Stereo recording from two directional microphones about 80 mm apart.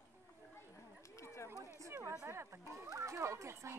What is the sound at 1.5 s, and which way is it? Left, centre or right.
Run, right.